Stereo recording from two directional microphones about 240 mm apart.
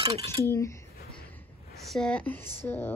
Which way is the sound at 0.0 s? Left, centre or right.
Right.